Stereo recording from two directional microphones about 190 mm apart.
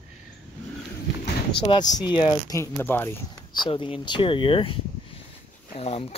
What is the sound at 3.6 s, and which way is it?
Speech, 25° left (ahead or behind).